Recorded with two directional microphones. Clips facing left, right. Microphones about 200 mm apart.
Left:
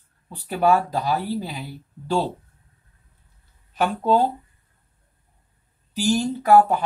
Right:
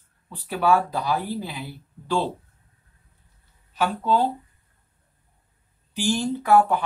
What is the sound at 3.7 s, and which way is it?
Speech, 45° left (ahead or behind).